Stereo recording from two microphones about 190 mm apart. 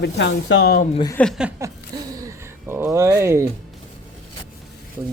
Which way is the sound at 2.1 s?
15° right (ahead or behind).